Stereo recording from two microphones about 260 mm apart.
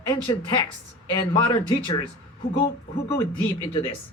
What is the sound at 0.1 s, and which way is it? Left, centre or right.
A man's voice, centre.